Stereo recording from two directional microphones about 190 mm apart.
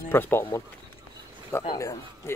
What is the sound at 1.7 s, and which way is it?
Speech, 15° left (ahead or behind).